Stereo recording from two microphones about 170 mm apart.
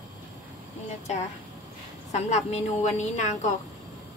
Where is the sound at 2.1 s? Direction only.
40° left (ahead or behind).